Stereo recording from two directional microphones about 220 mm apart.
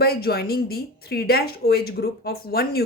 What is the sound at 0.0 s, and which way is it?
Speech, 45° left (ahead or behind).